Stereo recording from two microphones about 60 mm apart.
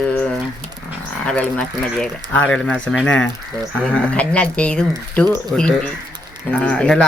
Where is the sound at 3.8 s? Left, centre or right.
Centre.